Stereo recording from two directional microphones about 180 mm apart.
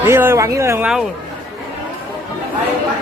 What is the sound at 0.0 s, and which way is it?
Speech, 15° right (ahead or behind).